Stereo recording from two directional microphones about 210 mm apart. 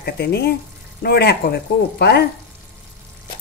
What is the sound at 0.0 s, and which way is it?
Dishes, 50° left (ahead or behind).